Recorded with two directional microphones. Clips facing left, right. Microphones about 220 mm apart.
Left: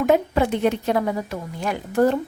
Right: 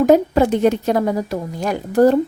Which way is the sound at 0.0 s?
40° right (ahead or behind).